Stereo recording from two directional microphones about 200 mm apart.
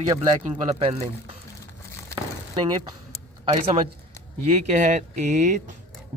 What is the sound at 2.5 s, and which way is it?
Speech, 20° right (ahead or behind).